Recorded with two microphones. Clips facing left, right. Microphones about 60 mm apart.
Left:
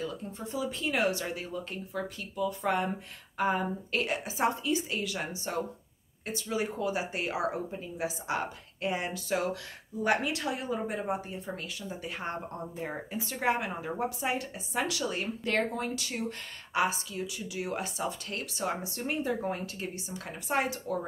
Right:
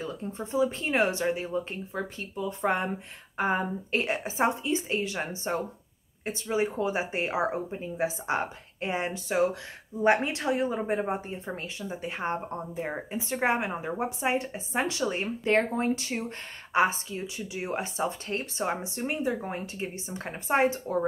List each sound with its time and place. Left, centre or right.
0.0 s a woman's voice: right